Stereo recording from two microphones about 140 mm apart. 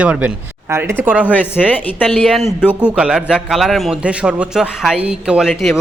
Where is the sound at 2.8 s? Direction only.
10° right (ahead or behind).